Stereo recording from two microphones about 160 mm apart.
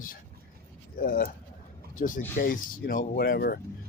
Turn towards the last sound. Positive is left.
turn(degrees=70)  # may be behind; listen again after turning